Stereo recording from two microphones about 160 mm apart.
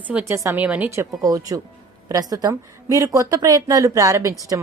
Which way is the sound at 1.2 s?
20° right (ahead or behind).